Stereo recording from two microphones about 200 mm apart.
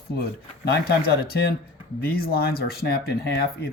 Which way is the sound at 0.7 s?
50° left (ahead or behind).